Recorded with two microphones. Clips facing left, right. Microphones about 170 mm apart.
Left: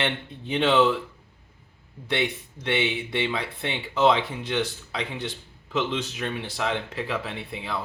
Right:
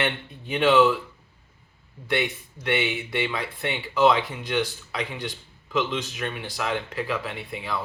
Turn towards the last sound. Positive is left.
turn(degrees=25)  # may be behind; listen again after turning